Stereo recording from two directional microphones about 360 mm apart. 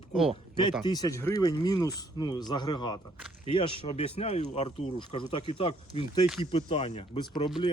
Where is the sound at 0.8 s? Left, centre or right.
Centre.